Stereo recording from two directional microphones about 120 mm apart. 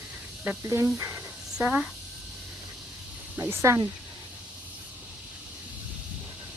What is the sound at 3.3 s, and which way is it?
Speech, 20° right (ahead or behind).